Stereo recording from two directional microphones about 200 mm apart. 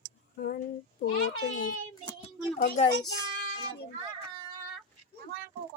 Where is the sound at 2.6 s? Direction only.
45° left (ahead or behind).